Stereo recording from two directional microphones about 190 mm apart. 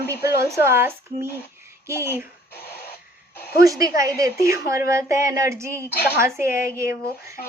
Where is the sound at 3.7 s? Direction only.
20° right (ahead or behind).